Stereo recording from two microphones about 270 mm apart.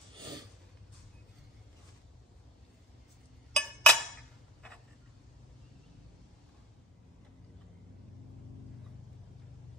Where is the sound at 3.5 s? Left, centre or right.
Centre.